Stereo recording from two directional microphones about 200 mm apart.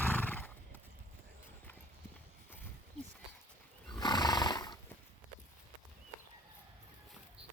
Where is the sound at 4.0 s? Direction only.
20° left (ahead or behind).